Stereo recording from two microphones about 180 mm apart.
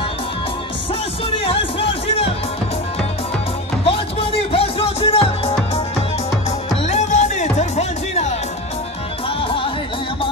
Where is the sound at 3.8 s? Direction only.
30° left (ahead or behind).